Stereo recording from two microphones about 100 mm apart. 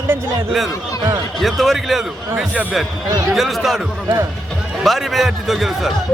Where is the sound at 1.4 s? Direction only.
Centre (ahead or behind).